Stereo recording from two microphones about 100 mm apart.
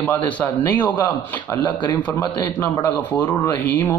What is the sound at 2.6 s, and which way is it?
Speech, 20° left (ahead or behind).